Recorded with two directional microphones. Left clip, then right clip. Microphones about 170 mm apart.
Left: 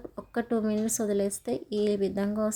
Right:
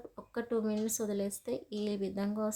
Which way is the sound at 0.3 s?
20° left (ahead or behind).